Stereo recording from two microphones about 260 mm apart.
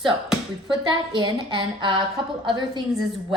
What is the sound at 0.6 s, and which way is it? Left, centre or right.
A woman's voice, centre.